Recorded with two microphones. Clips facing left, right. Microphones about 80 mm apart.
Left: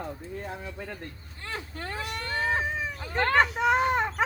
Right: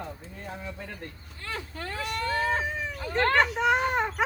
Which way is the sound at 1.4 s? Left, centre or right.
Centre.